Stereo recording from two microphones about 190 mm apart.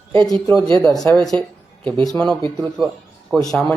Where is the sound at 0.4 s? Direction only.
10° left (ahead or behind).